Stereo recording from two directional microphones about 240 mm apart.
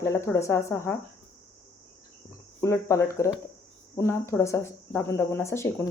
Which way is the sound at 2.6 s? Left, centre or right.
Centre.